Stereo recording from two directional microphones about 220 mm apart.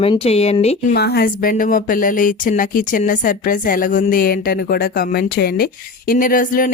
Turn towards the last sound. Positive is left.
turn(degrees=40)  # may be behind; listen again after turning